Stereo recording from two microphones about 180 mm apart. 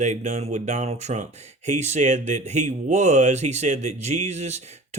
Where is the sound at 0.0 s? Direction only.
40° right (ahead or behind).